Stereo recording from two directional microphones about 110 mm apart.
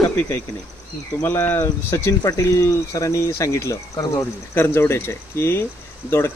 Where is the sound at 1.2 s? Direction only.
20° left (ahead or behind).